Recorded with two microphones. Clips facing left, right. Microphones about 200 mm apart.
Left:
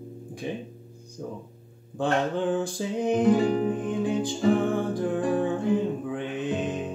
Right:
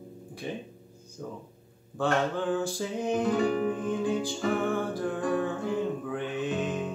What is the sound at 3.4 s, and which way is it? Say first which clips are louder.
Music: left 2 dB; 35° left (ahead or behind).